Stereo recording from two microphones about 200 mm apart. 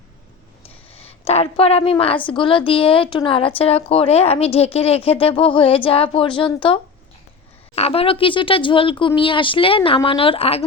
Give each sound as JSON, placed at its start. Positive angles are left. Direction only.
{"t": 0.9, "sound": "a woman's voice", "side_deg": 30}
{"t": 7.8, "sound": "a woman's voice", "side_deg": 30}